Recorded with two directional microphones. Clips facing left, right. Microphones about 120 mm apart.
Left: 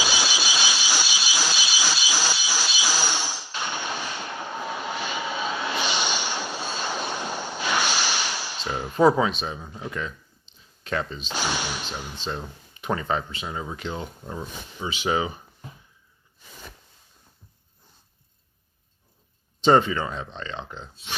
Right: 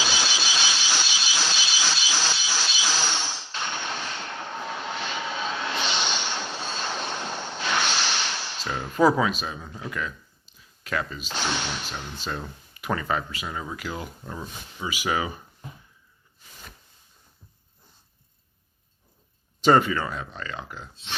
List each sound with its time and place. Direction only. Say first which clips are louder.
0.0 s a sound: left 1 dB; 10° left (ahead or behind)
9.0 s speech: left 1 dB; 30° left (ahead or behind)
11.3 s speech: left 1 dB; 10° left (ahead or behind)
12.2 s speech: left 1 dB; 25° left (ahead or behind)
19.6 s speech: left 1 dB; 25° left (ahead or behind)
20.9 s speech: even; 10° left (ahead or behind)